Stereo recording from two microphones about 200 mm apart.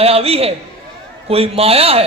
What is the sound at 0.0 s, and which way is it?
A woman's voice, 30° right (ahead or behind).